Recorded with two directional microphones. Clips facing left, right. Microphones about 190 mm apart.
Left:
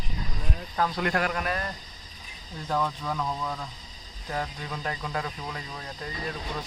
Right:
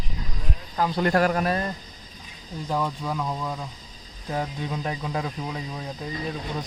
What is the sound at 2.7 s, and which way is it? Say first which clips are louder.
Speech: right 1 dB; 10° right (ahead or behind).